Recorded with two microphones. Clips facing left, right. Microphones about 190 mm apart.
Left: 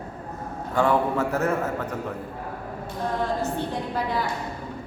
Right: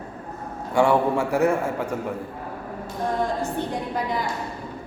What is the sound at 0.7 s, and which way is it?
A man's voice, 10° right (ahead or behind).